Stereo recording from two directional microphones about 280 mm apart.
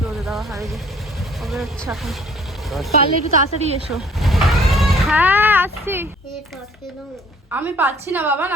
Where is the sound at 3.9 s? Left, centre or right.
Centre.